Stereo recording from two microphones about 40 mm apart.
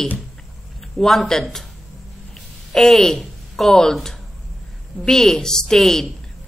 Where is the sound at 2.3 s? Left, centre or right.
Centre.